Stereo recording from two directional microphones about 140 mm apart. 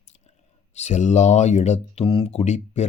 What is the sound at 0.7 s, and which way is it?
Speech, 55° left (ahead or behind).